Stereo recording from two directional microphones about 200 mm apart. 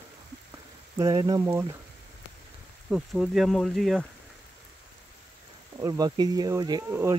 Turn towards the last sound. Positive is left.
turn(degrees=-15)  # may be behind; listen again after turning